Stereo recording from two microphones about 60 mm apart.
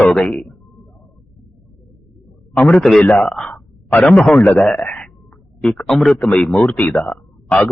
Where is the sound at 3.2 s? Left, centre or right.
Centre.